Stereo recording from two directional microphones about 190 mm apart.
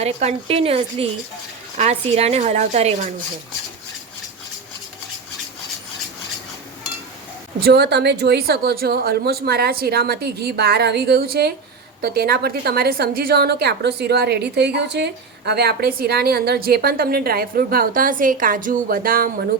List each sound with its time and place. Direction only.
0.0 s speech: 35° right (ahead or behind)
7.6 s a woman's voice: 60° right (ahead or behind)